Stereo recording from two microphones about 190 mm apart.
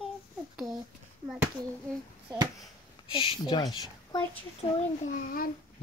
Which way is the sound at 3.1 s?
25° left (ahead or behind).